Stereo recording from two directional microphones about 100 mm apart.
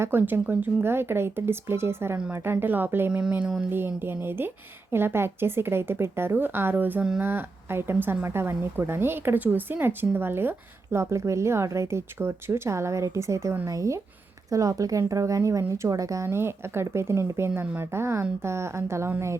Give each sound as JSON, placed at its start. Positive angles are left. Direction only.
{"t": 0.0, "sound": "speech", "side_deg": -20}
{"t": 3.7, "sound": "speech", "side_deg": -20}